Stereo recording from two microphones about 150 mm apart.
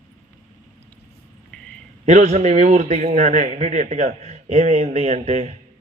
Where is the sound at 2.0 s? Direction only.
50° right (ahead or behind).